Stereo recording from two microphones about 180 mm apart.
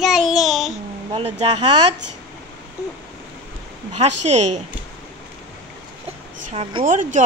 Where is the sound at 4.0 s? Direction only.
40° right (ahead or behind).